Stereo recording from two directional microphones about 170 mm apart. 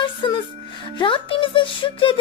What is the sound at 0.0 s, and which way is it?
Music, 30° left (ahead or behind).